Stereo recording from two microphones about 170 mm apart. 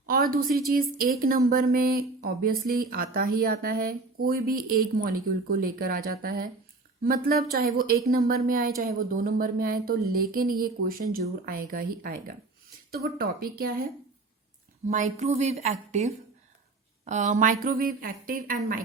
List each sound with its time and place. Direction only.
0.0 s a woman's voice: 60° right (ahead or behind)
14.8 s a woman's voice: 45° right (ahead or behind)